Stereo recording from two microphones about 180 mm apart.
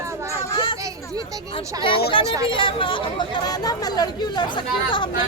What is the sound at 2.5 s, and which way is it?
Speech, 30° left (ahead or behind).